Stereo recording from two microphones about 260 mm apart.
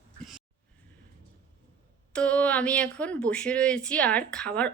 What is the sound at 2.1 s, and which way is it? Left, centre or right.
Speech, centre.